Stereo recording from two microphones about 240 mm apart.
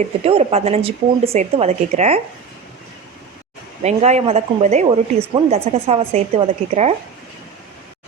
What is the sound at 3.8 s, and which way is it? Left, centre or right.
Speech, right.